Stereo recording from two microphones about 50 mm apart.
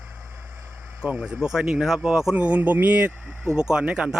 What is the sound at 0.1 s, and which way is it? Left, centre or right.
Vehicle, right.